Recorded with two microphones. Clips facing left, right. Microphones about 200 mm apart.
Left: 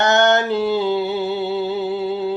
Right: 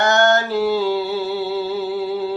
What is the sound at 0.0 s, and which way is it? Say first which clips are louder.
Music: left 1 dB; 20° left (ahead or behind).